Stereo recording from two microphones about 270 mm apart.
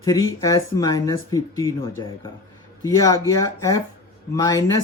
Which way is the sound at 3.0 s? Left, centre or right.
Centre.